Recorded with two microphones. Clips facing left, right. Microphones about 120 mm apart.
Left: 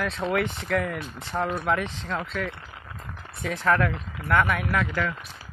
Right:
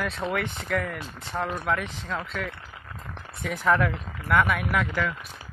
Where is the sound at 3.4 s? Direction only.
5° right (ahead or behind).